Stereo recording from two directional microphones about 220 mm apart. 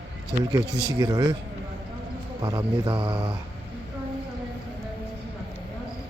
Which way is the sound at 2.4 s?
25° right (ahead or behind).